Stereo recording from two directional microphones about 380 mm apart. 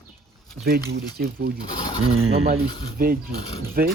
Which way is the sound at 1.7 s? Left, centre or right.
Centre.